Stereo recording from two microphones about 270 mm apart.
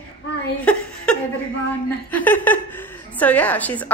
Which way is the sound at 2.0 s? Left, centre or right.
Centre.